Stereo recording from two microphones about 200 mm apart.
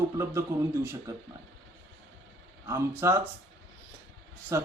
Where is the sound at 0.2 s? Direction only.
15° right (ahead or behind).